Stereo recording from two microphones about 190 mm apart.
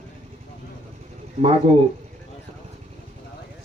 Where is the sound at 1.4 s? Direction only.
35° right (ahead or behind).